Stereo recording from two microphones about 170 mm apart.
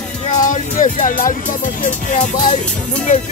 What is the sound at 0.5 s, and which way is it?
Speech, 50° left (ahead or behind).